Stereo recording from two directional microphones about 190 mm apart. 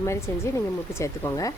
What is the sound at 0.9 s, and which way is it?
Speech, 15° left (ahead or behind).